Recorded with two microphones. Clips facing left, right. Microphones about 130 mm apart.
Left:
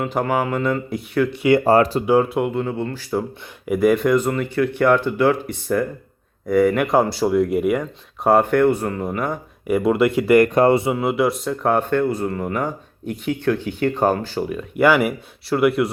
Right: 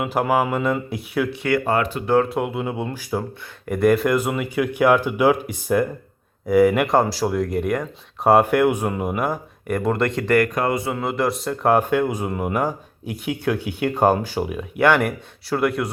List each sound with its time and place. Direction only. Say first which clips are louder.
0.0 s speech: right 1 dB; 5° right (ahead or behind)
1.6 s speech: left 6 dB; 35° left (ahead or behind)
2.0 s speech: left 2 dB; 5° left (ahead or behind); by 3.2 s 15° right (ahead or behind)
3.7 s speech: left 1 dB; centre (ahead or behind)
9.6 s speech: left 4 dB; 5° left (ahead or behind)
10.4 s speech: left 7 dB; 30° left (ahead or behind)
10.9 s speech: left 3 dB; 5° left (ahead or behind); by 14.6 s 10° right (ahead or behind)
14.8 s speech: left 2 dB; 5° left (ahead or behind)